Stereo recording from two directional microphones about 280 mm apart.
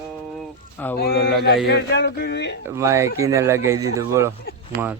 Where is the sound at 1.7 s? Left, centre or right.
Left.